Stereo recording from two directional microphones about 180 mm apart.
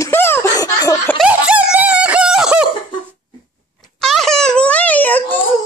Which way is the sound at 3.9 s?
Centre (ahead or behind).